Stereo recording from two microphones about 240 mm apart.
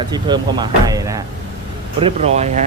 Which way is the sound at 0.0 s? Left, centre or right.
Centre.